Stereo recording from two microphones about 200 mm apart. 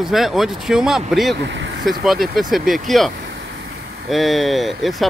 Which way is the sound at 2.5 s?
Centre (ahead or behind).